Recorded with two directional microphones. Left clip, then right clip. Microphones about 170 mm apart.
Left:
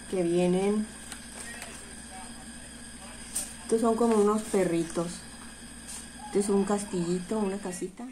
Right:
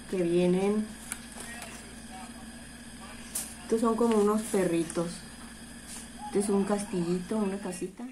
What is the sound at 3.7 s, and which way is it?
A woman's voice, 15° left (ahead or behind).